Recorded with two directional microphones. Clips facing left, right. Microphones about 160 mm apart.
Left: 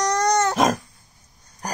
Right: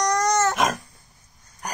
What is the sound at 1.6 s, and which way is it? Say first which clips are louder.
Dog: left 3 dB; 35° left (ahead or behind).